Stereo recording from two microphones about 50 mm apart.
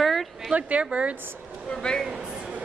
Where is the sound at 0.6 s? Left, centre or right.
Right.